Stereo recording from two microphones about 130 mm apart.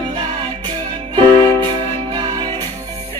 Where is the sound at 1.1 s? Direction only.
35° right (ahead or behind).